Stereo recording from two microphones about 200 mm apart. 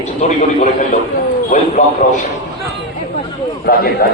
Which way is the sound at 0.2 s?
35° left (ahead or behind).